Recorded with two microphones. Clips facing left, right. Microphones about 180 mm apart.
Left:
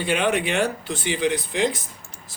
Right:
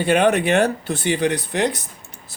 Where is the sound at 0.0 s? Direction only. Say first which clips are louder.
Right 6 dB; 50° right (ahead or behind).